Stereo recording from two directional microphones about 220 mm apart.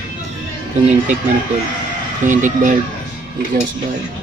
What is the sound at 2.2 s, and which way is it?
Speech, 35° right (ahead or behind).